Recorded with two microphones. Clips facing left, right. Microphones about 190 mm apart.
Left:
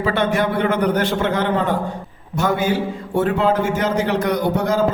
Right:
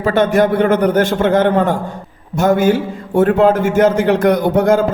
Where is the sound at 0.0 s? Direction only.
45° right (ahead or behind).